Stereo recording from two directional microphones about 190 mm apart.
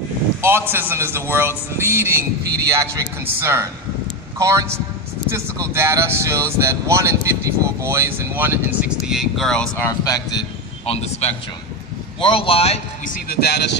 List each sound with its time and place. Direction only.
0.4 s speech: 10° right (ahead or behind); by 9.8 s 5° left (ahead or behind)
9.8 s speech: 20° left (ahead or behind)
10.9 s speech: 30° left (ahead or behind); by 13.7 s 60° left (ahead or behind)